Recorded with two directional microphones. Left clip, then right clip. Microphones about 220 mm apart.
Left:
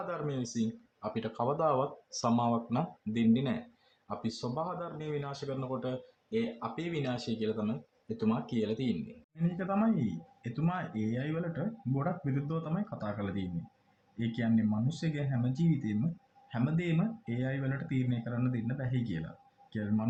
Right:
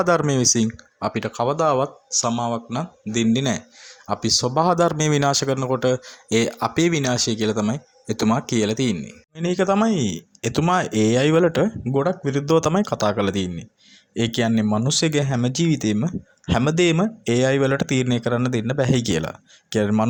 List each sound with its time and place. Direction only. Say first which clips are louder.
0.0 s speech: right 18 dB; 50° right (ahead or behind)
9.3 s speech: right 15 dB; 50° right (ahead or behind)